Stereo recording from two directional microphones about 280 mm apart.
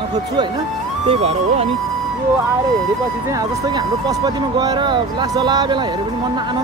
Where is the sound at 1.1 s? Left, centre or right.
Right.